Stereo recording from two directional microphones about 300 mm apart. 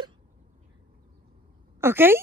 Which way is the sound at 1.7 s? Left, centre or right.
Centre.